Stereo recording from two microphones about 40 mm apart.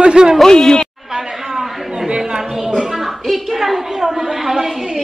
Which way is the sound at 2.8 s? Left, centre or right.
Centre.